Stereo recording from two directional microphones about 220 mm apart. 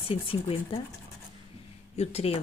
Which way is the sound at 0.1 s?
25° left (ahead or behind).